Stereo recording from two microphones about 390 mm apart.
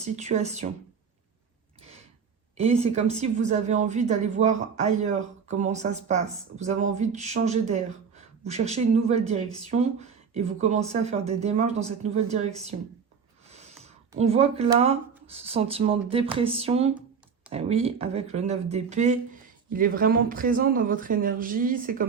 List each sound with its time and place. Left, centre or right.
0.0 s a woman's voice: centre
2.6 s a woman's voice: centre